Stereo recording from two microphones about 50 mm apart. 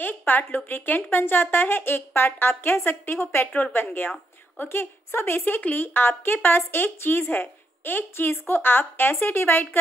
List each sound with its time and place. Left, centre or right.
0.0 s a woman's voice: left